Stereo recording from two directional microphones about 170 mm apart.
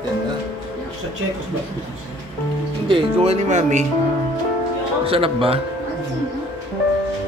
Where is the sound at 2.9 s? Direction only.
40° right (ahead or behind).